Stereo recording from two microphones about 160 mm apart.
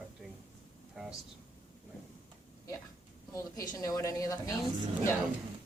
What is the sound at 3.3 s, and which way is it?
A woman's voice, 20° left (ahead or behind).